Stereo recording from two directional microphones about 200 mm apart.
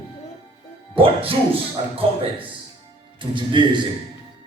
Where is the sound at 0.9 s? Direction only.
25° right (ahead or behind).